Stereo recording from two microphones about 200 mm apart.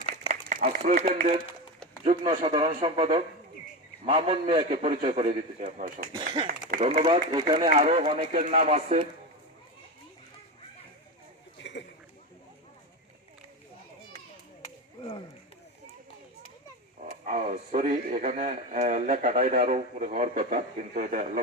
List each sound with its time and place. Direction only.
0.0 s a sound: 40° right (ahead or behind)
2.0 s a man's voice: 25° right (ahead or behind)
5.6 s speech: 45° right (ahead or behind)
6.2 s a man's voice: 25° right (ahead or behind)
11.6 s a sound: 60° left (ahead or behind)
17.2 s speech: 40° right (ahead or behind)